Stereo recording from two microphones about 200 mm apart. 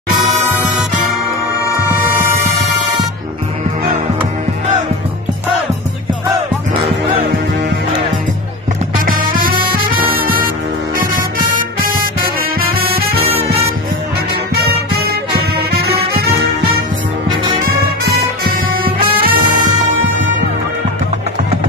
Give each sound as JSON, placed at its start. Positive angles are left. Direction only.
{"t": 0.3, "sound": "music", "side_deg": 0}
{"t": 8.9, "sound": "music", "side_deg": -45}
{"t": 11.1, "sound": "music", "side_deg": -45}
{"t": 15.7, "sound": "music", "side_deg": -50}
{"t": 19.2, "sound": "music", "side_deg": -45}